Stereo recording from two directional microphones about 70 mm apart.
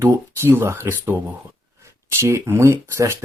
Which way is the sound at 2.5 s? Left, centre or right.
Right.